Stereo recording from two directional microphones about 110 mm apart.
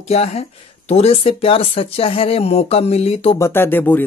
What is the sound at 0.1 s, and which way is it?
Speech, 70° left (ahead or behind).